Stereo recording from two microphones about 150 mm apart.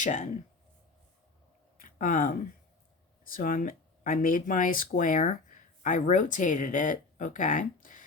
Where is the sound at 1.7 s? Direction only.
65° left (ahead or behind).